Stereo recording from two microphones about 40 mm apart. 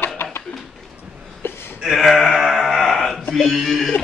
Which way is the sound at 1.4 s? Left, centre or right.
Left.